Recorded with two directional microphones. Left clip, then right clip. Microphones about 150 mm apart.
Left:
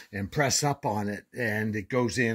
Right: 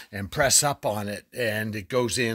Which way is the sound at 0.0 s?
35° right (ahead or behind).